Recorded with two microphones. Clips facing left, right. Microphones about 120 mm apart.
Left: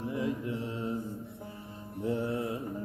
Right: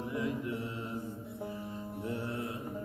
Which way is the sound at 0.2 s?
25° left (ahead or behind).